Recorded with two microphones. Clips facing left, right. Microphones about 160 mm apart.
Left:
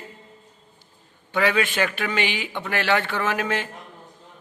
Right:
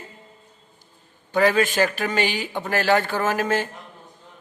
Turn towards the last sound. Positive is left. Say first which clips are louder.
# right 3 dB
turn(degrees=-40)  # may be behind; listen again after turning